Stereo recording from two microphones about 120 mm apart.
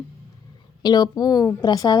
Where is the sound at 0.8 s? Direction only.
35° left (ahead or behind).